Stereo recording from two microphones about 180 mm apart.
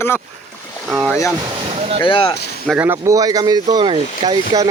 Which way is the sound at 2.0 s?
30° left (ahead or behind).